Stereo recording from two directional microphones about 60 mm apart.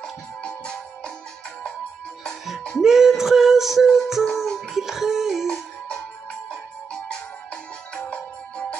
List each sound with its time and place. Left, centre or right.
0.4 s music: centre
2.8 s music: centre
4.8 s music: centre
8.1 s music: centre